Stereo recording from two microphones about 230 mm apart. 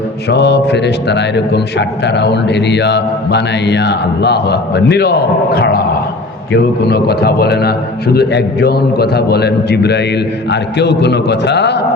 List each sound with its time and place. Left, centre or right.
0.3 s a man's voice: left